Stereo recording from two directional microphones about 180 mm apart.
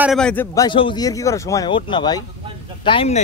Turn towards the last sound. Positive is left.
turn(degrees=30)  # may be behind; listen again after turning